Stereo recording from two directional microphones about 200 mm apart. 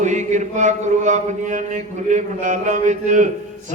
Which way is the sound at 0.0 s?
35° right (ahead or behind).